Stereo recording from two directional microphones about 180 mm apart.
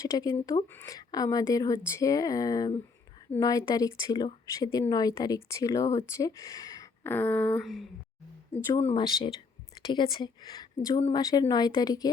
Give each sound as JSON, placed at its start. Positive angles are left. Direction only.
{"t": 0.0, "sound": "speech", "side_deg": 20}
{"t": 9.0, "sound": "a woman's voice", "side_deg": 25}